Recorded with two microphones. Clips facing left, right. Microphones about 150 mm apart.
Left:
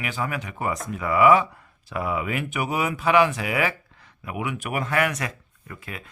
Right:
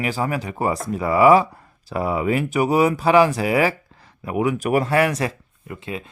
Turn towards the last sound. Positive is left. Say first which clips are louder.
# right 8 dB
turn(degrees=-25)  # may be behind; listen again after turning